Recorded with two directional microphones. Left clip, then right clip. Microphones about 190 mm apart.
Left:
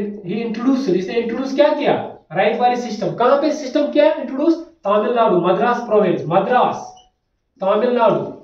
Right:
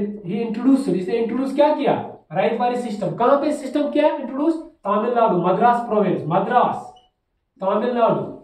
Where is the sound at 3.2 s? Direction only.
15° right (ahead or behind).